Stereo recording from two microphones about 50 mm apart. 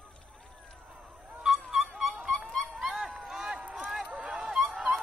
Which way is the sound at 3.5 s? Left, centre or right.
Right.